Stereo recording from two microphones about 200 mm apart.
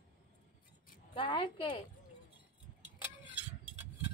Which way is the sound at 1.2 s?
25° left (ahead or behind).